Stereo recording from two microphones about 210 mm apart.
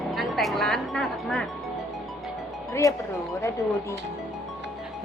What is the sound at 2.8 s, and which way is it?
Speech, 15° left (ahead or behind).